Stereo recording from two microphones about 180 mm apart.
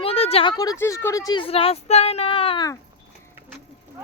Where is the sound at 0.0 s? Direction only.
35° left (ahead or behind).